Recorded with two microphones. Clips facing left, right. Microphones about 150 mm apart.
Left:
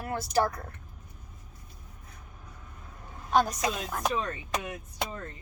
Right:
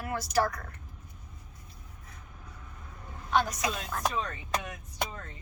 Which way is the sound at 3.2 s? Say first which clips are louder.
Left 3 dB; 40° left (ahead or behind).